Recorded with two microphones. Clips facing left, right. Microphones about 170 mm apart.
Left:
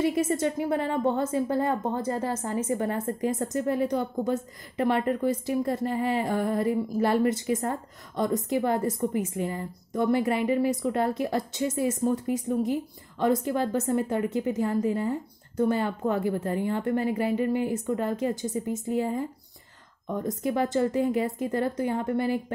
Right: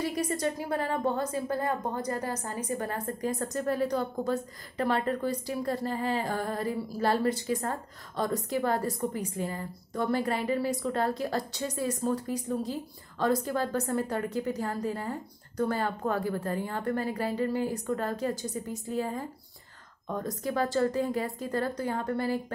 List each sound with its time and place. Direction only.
0.0 s a woman's voice: 25° left (ahead or behind)